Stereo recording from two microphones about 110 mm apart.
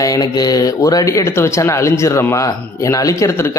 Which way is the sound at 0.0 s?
35° left (ahead or behind).